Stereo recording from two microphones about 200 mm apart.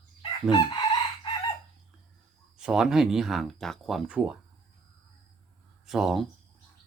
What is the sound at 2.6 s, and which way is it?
Speech, 5° right (ahead or behind).